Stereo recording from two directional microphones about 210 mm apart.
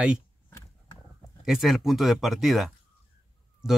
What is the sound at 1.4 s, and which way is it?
Speech, centre (ahead or behind).